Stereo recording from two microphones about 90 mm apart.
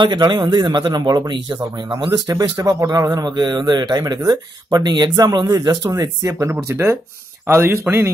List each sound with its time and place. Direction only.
0.0 s speech: 60° right (ahead or behind); by 3.1 s 40° right (ahead or behind)
3.1 s speech: 50° right (ahead or behind)
5.9 s speech: 35° right (ahead or behind)